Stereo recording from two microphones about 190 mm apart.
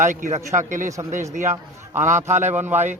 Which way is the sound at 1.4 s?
15° right (ahead or behind).